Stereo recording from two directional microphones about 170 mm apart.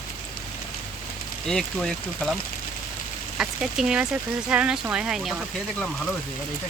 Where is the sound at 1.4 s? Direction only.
5° left (ahead or behind).